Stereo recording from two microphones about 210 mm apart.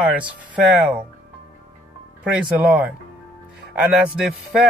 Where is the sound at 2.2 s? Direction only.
5° right (ahead or behind).